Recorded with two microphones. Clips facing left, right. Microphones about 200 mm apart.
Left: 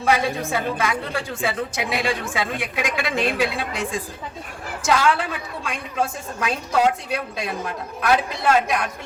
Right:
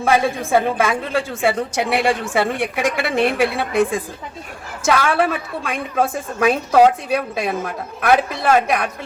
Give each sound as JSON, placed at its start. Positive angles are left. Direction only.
{"t": 0.0, "sound": "a woman's voice", "side_deg": -55}
{"t": 1.3, "sound": "a woman's voice", "side_deg": -70}
{"t": 4.9, "sound": "a woman's voice", "side_deg": -55}